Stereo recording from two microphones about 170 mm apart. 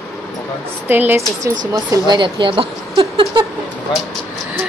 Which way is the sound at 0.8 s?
10° right (ahead or behind).